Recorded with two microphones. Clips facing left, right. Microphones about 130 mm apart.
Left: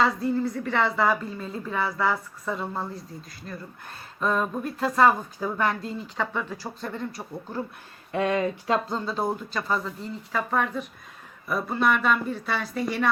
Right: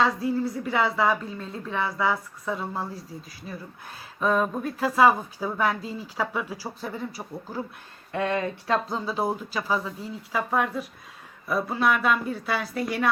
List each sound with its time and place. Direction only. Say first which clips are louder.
0.0 s speech: even; centre (ahead or behind)
8.1 s speech: left 2 dB; 15° left (ahead or behind)
8.9 s speech: even; 5° right (ahead or behind)